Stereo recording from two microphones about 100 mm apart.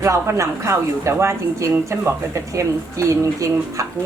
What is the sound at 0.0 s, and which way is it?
A woman's voice, 30° right (ahead or behind).